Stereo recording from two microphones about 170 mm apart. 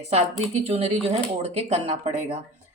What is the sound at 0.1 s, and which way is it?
Speech, 40° right (ahead or behind).